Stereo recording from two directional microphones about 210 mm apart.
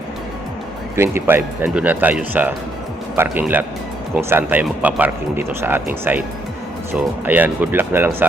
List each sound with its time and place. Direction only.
0.9 s speech: 10° right (ahead or behind)
7.3 s speech: 10° right (ahead or behind)